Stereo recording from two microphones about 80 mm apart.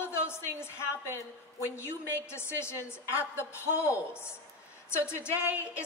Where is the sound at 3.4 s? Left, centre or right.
Left.